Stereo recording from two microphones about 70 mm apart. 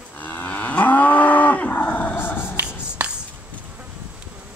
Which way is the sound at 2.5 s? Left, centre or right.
Centre.